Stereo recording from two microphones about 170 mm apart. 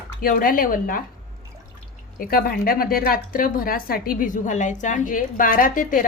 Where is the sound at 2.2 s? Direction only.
60° left (ahead or behind).